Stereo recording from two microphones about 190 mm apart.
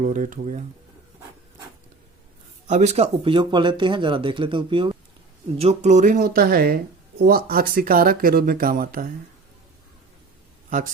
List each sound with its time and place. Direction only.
0.0 s speech: 40° right (ahead or behind)
2.6 s speech: 35° right (ahead or behind)
10.7 s speech: 45° right (ahead or behind)